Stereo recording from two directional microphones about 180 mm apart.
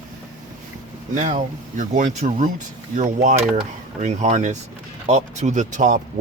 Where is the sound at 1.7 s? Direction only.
45° right (ahead or behind).